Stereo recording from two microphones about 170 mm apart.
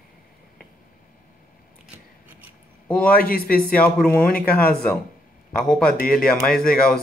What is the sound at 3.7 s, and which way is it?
Speech, 10° left (ahead or behind).